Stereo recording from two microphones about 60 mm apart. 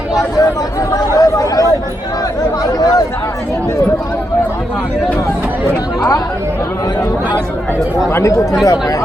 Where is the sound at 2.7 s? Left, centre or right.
Left.